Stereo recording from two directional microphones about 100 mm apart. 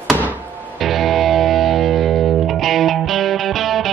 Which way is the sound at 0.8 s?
Centre (ahead or behind).